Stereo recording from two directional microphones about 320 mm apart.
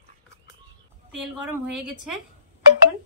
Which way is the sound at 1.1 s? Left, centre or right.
Centre.